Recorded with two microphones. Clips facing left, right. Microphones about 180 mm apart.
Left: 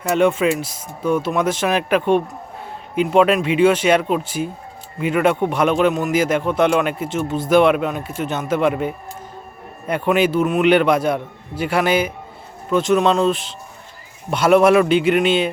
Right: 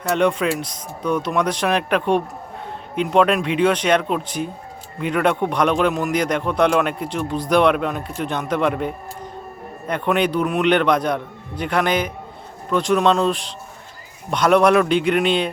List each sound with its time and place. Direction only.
0.1 s a man's voice: 5° left (ahead or behind)